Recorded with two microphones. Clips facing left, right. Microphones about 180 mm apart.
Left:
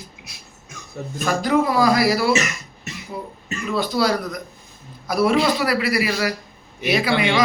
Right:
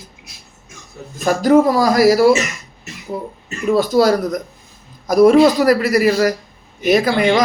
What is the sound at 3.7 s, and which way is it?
Speech, 45° right (ahead or behind).